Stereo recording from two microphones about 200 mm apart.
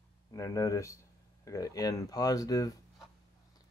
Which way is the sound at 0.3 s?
15° left (ahead or behind).